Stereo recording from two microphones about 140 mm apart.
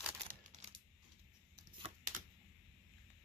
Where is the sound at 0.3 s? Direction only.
60° right (ahead or behind).